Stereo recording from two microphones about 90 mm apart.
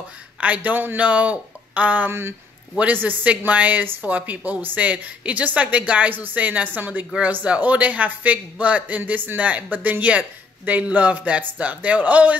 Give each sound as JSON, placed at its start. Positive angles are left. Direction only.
{"t": 0.4, "sound": "a man's voice", "side_deg": -15}